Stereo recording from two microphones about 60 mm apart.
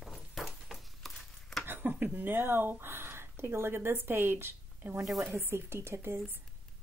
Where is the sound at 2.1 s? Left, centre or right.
Right.